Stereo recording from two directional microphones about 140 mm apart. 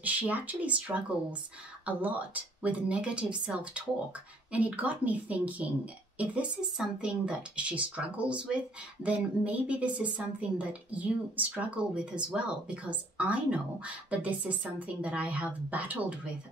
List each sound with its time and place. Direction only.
0.0 s speech: 10° right (ahead or behind)